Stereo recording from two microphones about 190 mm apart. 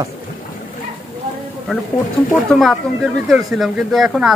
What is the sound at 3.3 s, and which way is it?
Speech, centre (ahead or behind).